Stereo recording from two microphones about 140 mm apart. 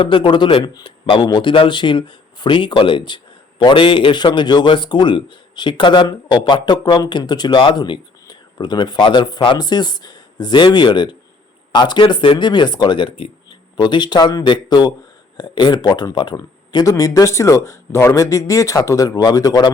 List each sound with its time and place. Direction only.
0.0 s a man's voice: 35° left (ahead or behind)